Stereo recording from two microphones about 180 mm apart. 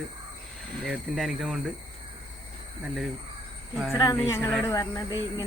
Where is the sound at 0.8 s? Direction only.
5° right (ahead or behind).